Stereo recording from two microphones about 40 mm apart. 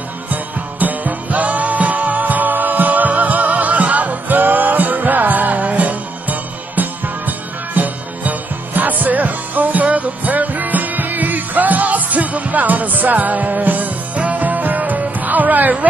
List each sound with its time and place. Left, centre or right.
0.3 s music: right